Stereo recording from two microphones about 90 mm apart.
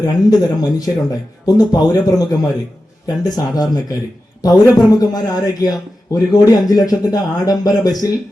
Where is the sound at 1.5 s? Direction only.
50° left (ahead or behind).